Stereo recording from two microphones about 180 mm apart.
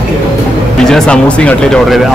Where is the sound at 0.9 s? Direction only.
5° left (ahead or behind).